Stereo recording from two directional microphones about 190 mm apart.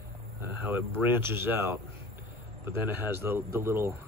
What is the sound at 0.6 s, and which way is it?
Speech, 10° right (ahead or behind).